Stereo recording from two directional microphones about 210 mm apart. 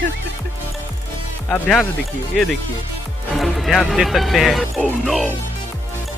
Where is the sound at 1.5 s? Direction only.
5° left (ahead or behind).